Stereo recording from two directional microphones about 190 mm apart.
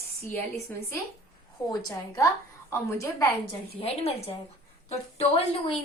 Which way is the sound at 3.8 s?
30° left (ahead or behind).